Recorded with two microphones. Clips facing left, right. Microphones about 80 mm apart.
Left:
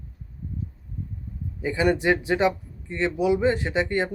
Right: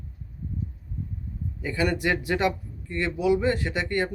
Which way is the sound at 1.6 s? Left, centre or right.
Centre.